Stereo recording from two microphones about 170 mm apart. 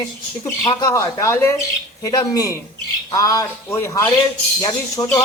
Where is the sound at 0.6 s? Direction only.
20° left (ahead or behind).